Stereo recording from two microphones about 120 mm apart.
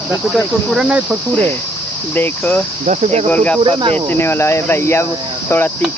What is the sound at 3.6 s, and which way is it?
Cricket, 45° right (ahead or behind).